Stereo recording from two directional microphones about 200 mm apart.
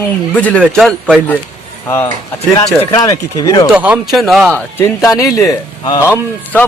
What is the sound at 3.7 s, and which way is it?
A man's voice, 5° right (ahead or behind).